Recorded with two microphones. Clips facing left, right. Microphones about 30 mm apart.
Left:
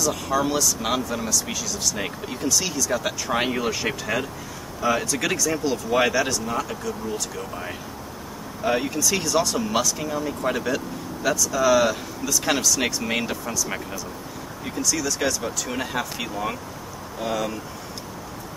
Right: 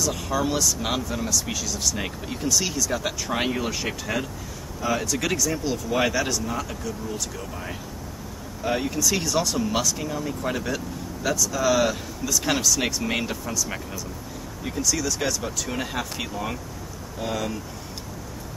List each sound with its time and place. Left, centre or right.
0.0 s speech: centre